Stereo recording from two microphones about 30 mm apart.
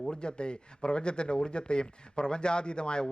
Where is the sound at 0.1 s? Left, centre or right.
Left.